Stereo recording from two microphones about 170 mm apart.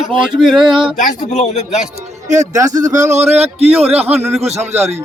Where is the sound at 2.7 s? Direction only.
45° right (ahead or behind).